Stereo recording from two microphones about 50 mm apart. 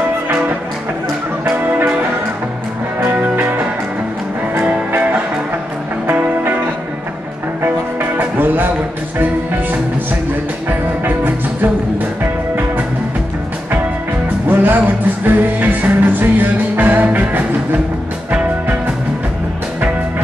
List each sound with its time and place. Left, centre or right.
4.6 s music: right
7.6 s music: right
10.7 s music: right
14.5 s music: right